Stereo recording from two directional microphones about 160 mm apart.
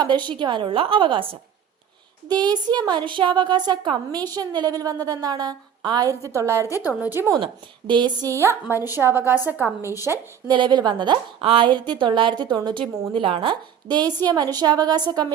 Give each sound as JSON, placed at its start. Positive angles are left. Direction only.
{"t": 0.3, "sound": "a woman's voice", "side_deg": -30}
{"t": 6.7, "sound": "a woman's voice", "side_deg": 20}
{"t": 7.0, "sound": "a woman's voice", "side_deg": -15}
{"t": 7.3, "sound": "a woman's voice", "side_deg": -30}
{"t": 8.3, "sound": "a woman's voice", "side_deg": -15}
{"t": 10.5, "sound": "a woman's voice", "side_deg": -30}